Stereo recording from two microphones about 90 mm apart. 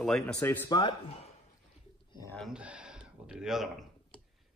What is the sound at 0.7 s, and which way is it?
Speech, 60° left (ahead or behind).